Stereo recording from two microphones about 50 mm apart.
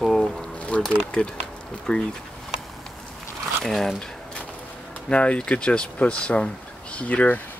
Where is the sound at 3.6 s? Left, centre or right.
Centre.